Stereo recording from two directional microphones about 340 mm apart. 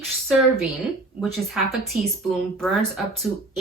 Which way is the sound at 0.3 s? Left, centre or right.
Centre.